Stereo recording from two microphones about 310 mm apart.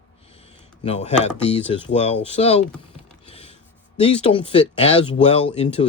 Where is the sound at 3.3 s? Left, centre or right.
Centre.